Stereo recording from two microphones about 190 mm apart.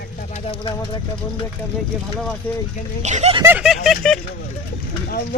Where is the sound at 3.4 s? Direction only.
5° right (ahead or behind).